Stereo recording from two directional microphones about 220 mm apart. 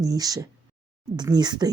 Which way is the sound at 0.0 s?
15° right (ahead or behind).